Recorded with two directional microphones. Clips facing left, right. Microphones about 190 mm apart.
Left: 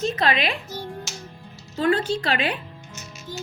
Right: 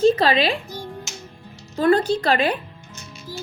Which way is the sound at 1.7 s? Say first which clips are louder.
Right 4 dB; 40° right (ahead or behind).